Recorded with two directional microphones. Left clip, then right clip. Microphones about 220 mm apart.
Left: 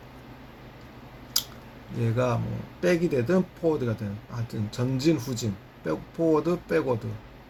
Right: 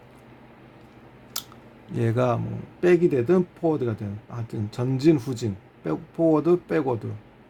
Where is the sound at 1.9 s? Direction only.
50° right (ahead or behind).